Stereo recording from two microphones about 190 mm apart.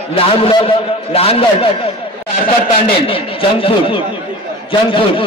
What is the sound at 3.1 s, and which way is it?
A man's voice, 30° left (ahead or behind).